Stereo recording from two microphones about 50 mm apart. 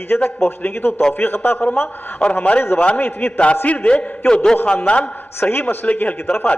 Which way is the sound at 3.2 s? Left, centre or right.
Left.